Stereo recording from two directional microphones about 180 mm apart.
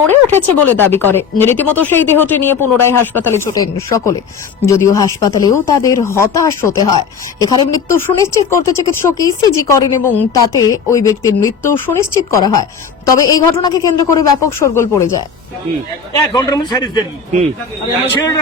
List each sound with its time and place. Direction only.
0.1 s a woman's voice: 10° left (ahead or behind)
16.3 s speech: 20° left (ahead or behind)